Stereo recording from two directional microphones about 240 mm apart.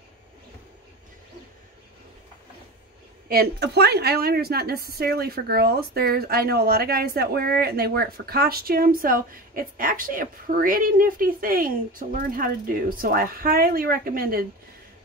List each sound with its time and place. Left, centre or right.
3.3 s a woman's voice: right